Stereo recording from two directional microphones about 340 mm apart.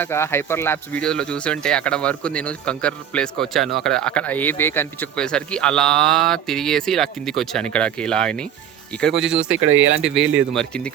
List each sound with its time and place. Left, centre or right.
0.0 s speech: centre
9.6 s speech: right
10.0 s speech: centre